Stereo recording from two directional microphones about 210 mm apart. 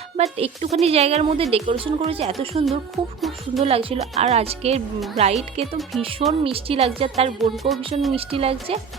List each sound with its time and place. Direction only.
0.2 s speech: 30° right (ahead or behind)
3.2 s speech: centre (ahead or behind)
3.6 s speech: 25° right (ahead or behind)
7.5 s speech: centre (ahead or behind)
7.8 s speech: 25° right (ahead or behind)